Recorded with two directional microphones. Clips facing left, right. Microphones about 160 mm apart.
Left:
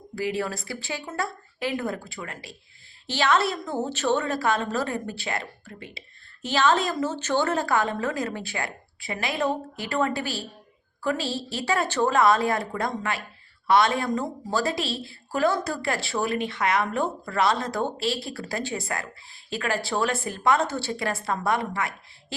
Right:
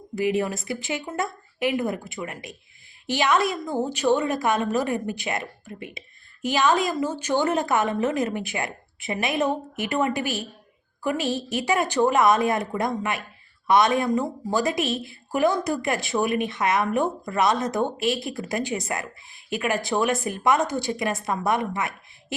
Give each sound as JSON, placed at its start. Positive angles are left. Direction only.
{"t": 0.2, "sound": "a woman's voice", "side_deg": -20}